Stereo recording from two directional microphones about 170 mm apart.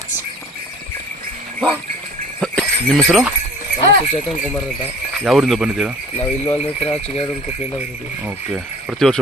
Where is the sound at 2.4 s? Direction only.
5° left (ahead or behind).